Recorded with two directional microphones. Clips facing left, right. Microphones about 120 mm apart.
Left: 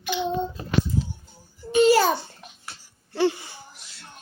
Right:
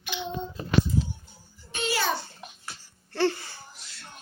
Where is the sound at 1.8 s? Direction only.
40° left (ahead or behind).